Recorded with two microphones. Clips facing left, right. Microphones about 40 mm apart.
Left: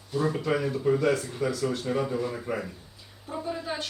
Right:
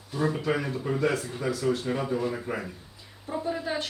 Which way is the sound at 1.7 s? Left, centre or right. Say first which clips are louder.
Right 3 dB; centre.